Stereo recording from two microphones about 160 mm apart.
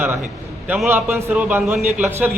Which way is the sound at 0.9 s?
15° right (ahead or behind).